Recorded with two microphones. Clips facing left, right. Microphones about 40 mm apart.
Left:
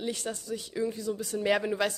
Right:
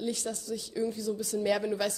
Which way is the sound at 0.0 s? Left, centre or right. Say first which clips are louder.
Even; left.